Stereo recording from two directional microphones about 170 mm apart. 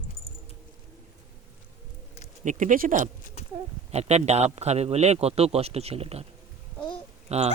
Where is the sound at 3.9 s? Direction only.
40° right (ahead or behind).